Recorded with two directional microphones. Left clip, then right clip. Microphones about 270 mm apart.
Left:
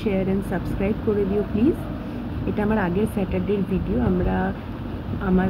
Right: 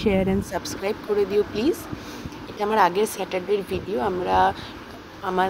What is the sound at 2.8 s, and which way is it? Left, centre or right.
Speech, right.